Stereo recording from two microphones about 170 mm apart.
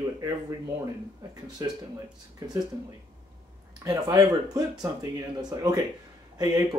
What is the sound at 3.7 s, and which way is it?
Speech, 25° right (ahead or behind).